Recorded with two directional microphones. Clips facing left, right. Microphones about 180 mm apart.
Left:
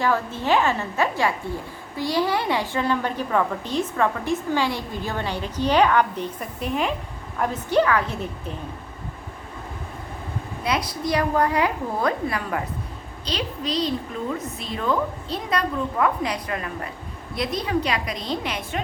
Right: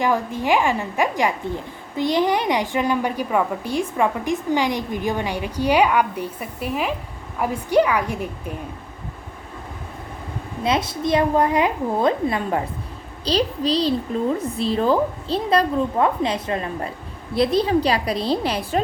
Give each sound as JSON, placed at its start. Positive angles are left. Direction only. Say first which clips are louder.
{"t": 0.0, "sound": "a woman's voice", "louder": "right 2 dB", "side_deg": -15}
{"t": 10.6, "sound": "a woman's voice", "louder": "right 4 dB", "side_deg": -25}